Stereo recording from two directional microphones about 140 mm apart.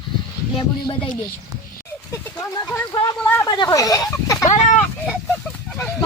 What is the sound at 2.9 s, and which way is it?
Speech, 25° left (ahead or behind).